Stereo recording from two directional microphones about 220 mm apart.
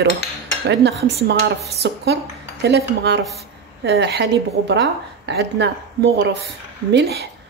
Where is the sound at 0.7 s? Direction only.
50° right (ahead or behind).